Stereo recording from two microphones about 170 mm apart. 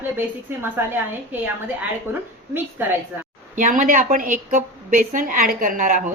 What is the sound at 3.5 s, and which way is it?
A woman's voice, 50° right (ahead or behind).